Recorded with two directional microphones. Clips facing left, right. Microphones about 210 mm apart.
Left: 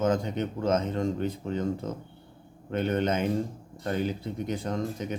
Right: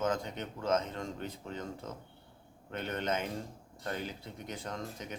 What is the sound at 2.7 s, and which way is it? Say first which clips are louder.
Speech: left 8 dB; 20° left (ahead or behind).